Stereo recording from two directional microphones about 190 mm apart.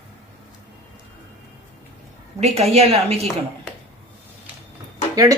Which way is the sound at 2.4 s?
15° right (ahead or behind).